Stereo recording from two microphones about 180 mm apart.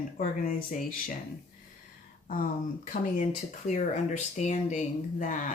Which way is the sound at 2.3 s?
50° left (ahead or behind).